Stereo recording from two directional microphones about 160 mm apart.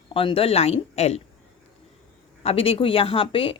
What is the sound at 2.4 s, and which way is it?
Speech, 35° left (ahead or behind).